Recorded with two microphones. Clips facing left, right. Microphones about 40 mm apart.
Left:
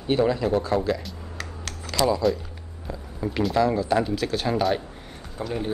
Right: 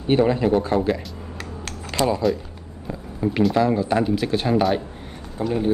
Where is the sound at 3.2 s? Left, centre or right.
Right.